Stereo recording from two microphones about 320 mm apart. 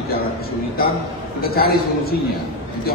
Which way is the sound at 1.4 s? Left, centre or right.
Left.